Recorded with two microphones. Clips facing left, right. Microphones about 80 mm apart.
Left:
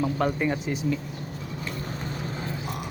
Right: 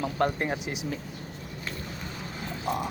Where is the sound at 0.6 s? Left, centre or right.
Right.